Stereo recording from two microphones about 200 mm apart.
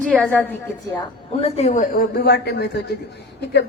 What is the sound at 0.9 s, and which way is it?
A man's voice, 30° left (ahead or behind).